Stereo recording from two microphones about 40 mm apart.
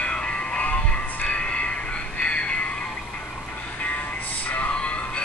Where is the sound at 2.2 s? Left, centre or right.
Left.